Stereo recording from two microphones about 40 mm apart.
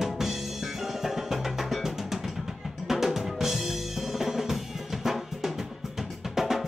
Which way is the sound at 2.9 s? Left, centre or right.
Centre.